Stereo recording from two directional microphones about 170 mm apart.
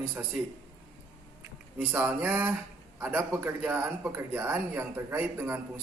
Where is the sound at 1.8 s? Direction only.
10° right (ahead or behind).